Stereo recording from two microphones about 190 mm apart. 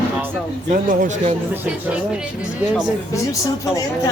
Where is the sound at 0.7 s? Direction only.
45° right (ahead or behind).